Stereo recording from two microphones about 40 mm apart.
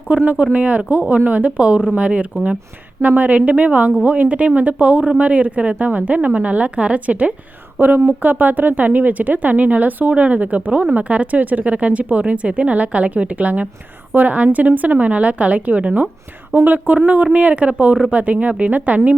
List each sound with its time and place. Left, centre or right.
0.1 s a woman's voice: right
3.0 s a woman's voice: right
7.8 s a woman's voice: right
16.6 s speech: right
17.3 s a woman's voice: right